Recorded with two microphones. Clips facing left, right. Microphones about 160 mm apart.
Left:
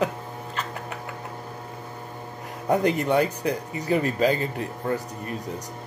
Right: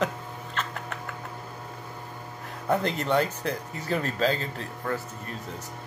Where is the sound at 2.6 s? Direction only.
15° left (ahead or behind).